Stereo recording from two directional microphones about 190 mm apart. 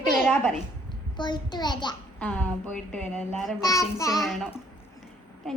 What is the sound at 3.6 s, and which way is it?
Speech, 15° left (ahead or behind).